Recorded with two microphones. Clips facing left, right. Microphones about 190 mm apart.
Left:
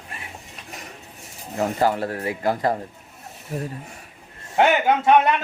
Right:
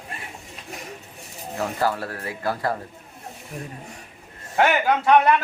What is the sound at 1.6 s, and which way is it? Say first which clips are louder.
Speech: left 4 dB; 20° left (ahead or behind).